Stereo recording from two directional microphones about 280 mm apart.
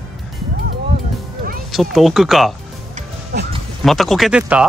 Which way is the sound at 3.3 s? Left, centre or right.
Right.